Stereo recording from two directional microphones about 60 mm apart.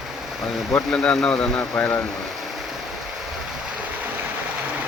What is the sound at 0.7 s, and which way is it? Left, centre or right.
Speech, centre.